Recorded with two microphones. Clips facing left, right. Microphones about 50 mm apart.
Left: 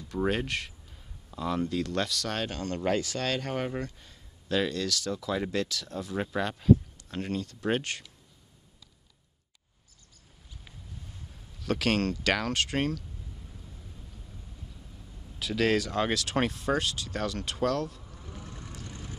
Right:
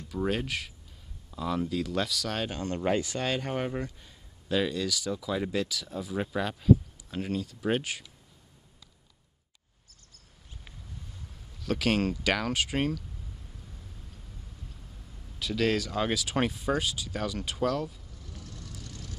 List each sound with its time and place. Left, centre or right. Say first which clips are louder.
0.3 s speech: left 1 dB; centre
2.5 s speech: right 1 dB; centre
11.6 s speech: even; centre
15.3 s speech: left 1 dB; centre
18.1 s vehicle: left 3 dB; left